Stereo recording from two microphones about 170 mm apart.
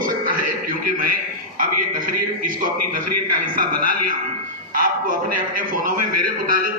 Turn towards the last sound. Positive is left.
turn(degrees=-55)  # may be behind; listen again after turning